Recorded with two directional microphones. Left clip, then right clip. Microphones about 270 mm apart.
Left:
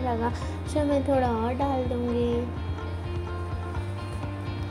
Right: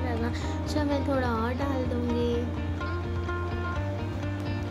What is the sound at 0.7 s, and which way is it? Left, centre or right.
Music, centre.